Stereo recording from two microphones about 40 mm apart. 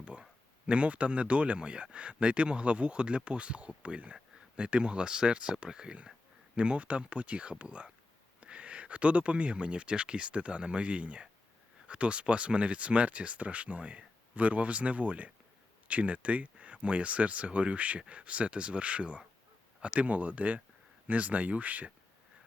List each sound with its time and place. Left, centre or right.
0.0 s speech: right